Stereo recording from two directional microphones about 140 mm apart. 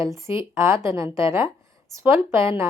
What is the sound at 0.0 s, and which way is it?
Speech, 20° right (ahead or behind).